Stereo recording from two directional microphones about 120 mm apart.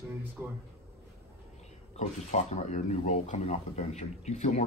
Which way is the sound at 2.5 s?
75° left (ahead or behind).